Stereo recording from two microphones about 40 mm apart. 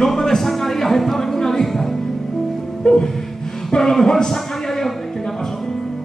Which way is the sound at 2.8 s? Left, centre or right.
Centre.